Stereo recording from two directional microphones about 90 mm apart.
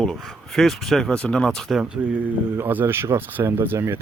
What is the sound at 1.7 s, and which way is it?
Speech, 10° right (ahead or behind).